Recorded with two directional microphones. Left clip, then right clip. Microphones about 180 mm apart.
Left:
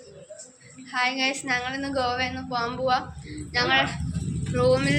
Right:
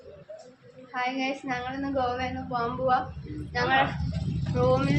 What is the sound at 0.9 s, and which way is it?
A woman's voice, centre (ahead or behind).